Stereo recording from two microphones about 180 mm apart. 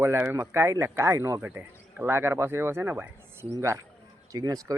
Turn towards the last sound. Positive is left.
turn(degrees=-20)  # may be behind; listen again after turning